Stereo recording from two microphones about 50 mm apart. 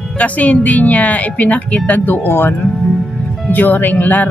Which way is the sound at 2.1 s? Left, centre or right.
Left.